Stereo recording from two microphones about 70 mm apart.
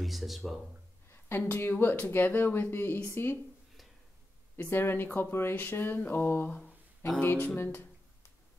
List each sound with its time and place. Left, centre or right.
0.0 s speech: centre
1.1 s speech: left
4.6 s speech: left
7.5 s a sound: left